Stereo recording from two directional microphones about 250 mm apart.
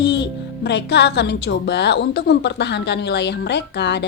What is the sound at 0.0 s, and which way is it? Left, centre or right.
Speech, left.